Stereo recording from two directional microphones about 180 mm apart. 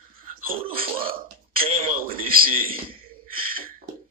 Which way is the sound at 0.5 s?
55° right (ahead or behind).